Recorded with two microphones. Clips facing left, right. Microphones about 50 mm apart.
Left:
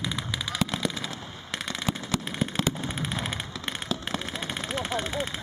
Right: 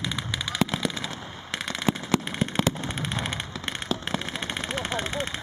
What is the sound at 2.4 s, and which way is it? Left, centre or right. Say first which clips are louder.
Fireworks: right 2 dB; centre.